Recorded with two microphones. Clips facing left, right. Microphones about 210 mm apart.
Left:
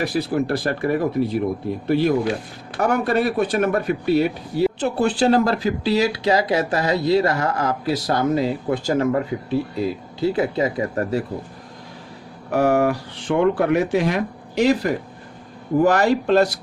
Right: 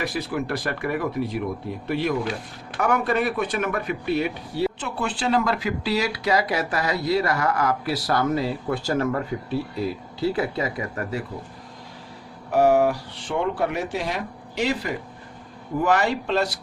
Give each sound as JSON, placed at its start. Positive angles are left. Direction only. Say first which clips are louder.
{"t": 0.0, "sound": "speech", "louder": "left 6 dB", "side_deg": 35}
{"t": 10.9, "sound": "speech", "louder": "left 7 dB", "side_deg": 35}
{"t": 12.5, "sound": "speech", "louder": "left 1 dB", "side_deg": 55}